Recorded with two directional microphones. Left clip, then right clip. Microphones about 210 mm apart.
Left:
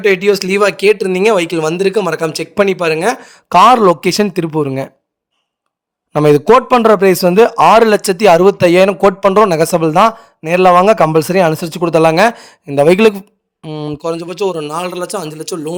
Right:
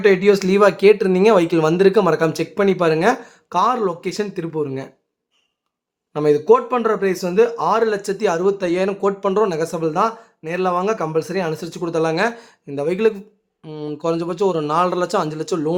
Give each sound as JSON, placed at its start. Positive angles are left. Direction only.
{"t": 0.0, "sound": "speech", "side_deg": 35}
{"t": 6.1, "sound": "a man's voice", "side_deg": 50}
{"t": 15.4, "sound": "speech", "side_deg": 0}